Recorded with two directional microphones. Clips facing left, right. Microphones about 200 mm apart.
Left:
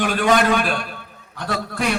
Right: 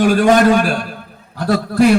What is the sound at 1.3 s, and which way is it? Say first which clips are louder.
Speech: right 10 dB; 35° right (ahead or behind).